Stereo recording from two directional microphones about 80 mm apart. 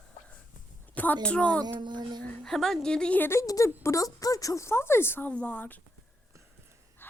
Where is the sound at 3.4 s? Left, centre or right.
Left.